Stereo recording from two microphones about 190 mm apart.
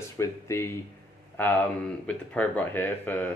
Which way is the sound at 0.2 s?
15° left (ahead or behind).